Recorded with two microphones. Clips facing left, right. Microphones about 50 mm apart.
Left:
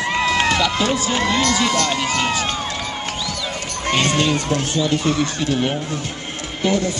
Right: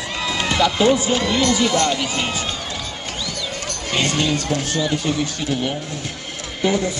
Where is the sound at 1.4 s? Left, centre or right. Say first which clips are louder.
Right 1 dB; centre.